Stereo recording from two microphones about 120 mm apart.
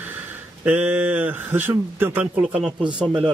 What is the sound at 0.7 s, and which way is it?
Speech, 15° right (ahead or behind).